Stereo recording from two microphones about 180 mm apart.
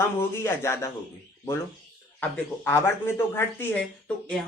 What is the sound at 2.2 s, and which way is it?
Speech, 10° left (ahead or behind).